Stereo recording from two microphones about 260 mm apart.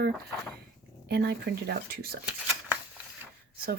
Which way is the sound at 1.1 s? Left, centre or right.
Right.